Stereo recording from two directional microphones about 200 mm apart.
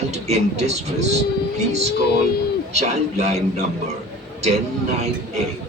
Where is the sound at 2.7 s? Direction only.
35° right (ahead or behind).